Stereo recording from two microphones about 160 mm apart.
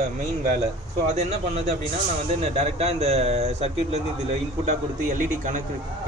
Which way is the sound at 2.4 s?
40° right (ahead or behind).